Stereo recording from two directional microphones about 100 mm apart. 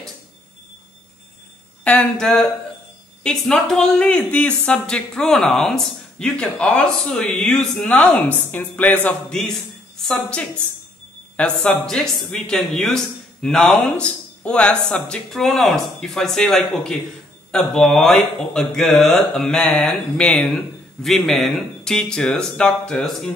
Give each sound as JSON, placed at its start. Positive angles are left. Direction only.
{"t": 1.9, "sound": "speech", "side_deg": 10}
{"t": 21.0, "sound": "speech", "side_deg": 0}